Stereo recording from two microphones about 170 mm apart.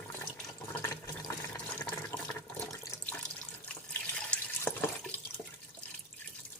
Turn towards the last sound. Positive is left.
turn(degrees=5)  # may be behind; listen again after turning